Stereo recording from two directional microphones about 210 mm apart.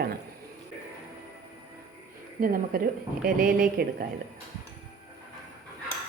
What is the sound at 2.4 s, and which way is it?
Speech, 45° right (ahead or behind).